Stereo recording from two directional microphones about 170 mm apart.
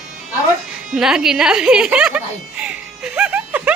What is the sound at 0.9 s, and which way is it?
Speech, 5° right (ahead or behind).